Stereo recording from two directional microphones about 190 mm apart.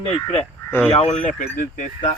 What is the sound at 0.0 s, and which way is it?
Speech, 30° left (ahead or behind).